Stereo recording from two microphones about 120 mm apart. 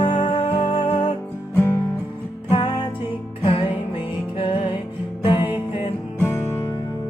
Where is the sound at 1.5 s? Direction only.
20° left (ahead or behind).